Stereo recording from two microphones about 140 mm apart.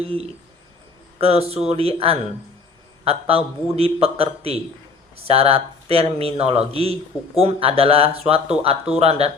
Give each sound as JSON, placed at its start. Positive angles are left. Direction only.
{"t": 0.0, "sound": "speech", "side_deg": -45}